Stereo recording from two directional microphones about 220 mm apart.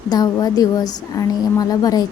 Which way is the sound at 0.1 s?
20° left (ahead or behind).